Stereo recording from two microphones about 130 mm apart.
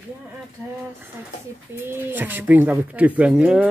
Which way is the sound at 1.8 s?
15° right (ahead or behind).